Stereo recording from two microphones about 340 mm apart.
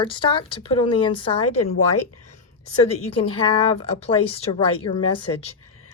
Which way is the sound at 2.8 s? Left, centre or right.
Centre.